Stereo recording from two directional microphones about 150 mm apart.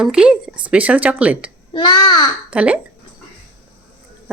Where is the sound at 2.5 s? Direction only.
10° right (ahead or behind).